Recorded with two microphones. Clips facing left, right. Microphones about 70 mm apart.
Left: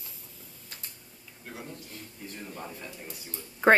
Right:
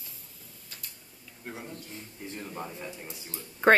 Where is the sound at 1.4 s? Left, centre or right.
Right.